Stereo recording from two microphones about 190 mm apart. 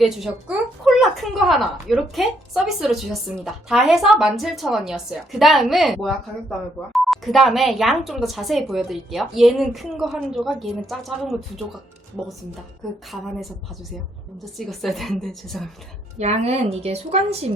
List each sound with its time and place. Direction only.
0.0 s a woman's voice: centre (ahead or behind)
13.1 s a woman's voice: centre (ahead or behind)
14.7 s a woman's voice: centre (ahead or behind)
16.1 s a woman's voice: 35° right (ahead or behind)